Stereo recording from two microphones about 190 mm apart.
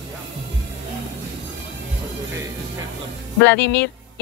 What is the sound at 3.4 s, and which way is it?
Speech, 70° left (ahead or behind).